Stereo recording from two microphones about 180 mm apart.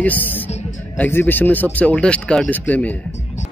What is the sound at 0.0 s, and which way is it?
Speech, 10° left (ahead or behind).